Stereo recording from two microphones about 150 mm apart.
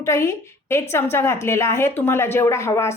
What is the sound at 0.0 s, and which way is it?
A woman's voice, 20° left (ahead or behind).